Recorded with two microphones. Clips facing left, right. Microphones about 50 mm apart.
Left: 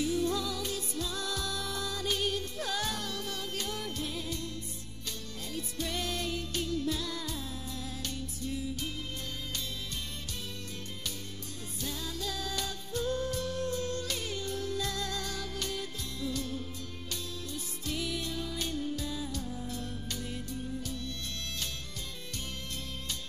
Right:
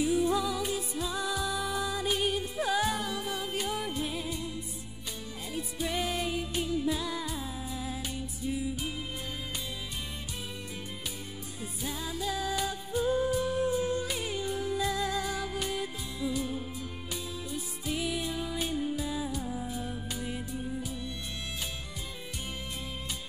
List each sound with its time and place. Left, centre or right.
0.0 s music: centre
5.5 s music: centre
11.8 s music: centre
19.7 s music: centre